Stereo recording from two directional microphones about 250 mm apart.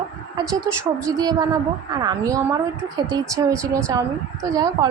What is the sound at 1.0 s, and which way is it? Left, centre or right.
A woman's voice, centre.